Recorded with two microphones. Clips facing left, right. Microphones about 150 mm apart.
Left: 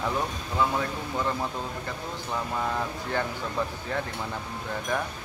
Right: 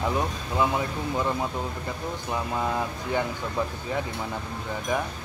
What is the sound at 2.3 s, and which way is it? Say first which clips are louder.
Speech: right 2 dB; 10° right (ahead or behind).